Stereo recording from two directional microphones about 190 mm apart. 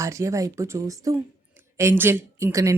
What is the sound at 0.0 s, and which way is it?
Speech, 15° right (ahead or behind).